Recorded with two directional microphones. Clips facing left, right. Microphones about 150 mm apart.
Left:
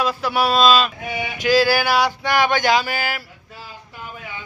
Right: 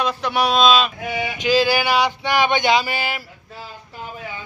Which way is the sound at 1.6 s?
15° right (ahead or behind).